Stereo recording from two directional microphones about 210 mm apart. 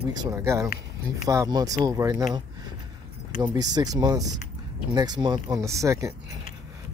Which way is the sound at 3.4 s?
20° right (ahead or behind).